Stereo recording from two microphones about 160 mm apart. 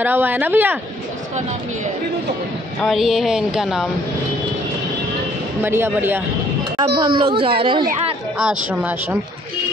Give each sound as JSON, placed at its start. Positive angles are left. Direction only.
{"t": 0.0, "sound": "speech", "side_deg": -10}
{"t": 2.8, "sound": "speech", "side_deg": 0}
{"t": 5.6, "sound": "speech", "side_deg": -15}
{"t": 7.0, "sound": "speech", "side_deg": -30}
{"t": 8.4, "sound": "speech", "side_deg": -5}